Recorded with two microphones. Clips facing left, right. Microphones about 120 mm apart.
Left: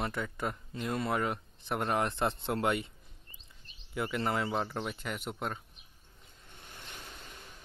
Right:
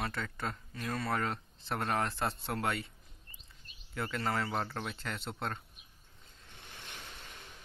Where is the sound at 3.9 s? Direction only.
15° left (ahead or behind).